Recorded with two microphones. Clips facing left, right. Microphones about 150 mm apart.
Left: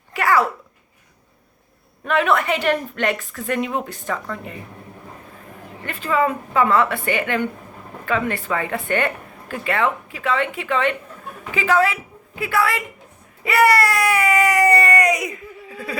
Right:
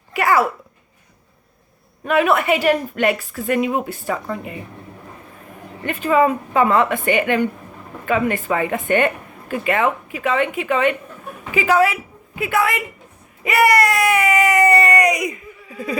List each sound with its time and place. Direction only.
0.1 s a sound: 10° right (ahead or behind)
2.0 s speech: 10° right (ahead or behind)
5.8 s a woman's voice: 20° right (ahead or behind)